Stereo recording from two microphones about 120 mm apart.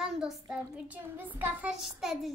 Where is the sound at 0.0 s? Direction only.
5° right (ahead or behind).